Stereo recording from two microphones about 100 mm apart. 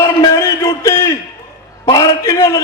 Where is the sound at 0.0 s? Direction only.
35° left (ahead or behind).